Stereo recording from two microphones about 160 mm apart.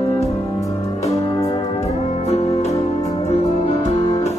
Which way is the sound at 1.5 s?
40° left (ahead or behind).